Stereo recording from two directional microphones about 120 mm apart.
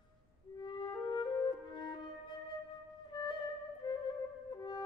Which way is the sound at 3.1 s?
35° left (ahead or behind).